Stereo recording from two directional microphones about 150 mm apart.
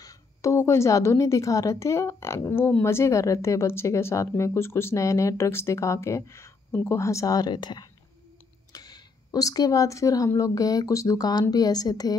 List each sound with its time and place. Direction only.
0.0 s a woman's voice: 20° left (ahead or behind)